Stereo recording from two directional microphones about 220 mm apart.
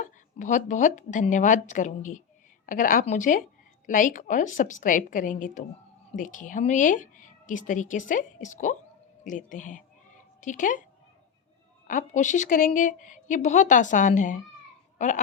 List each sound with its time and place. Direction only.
0.0 s speech: 35° left (ahead or behind)
11.9 s speech: 35° left (ahead or behind)
14.9 s a sound: 35° left (ahead or behind)